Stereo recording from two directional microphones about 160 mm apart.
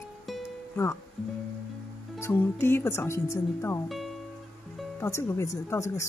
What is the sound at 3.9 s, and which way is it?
Music, centre (ahead or behind).